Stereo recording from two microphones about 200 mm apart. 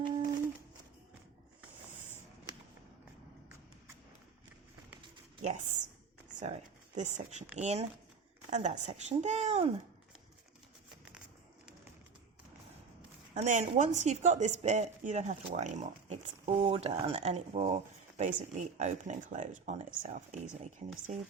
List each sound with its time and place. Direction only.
5.4 s speech: 35° right (ahead or behind)
6.9 s speech: 35° right (ahead or behind)
13.3 s speech: 35° right (ahead or behind)